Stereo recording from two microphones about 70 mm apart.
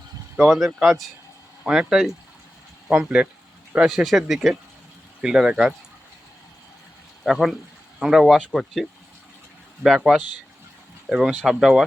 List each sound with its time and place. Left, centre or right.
0.3 s speech: centre
2.9 s speech: centre
7.3 s speech: centre